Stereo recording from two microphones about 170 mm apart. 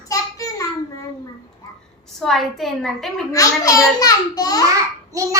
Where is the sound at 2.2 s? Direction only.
Centre (ahead or behind).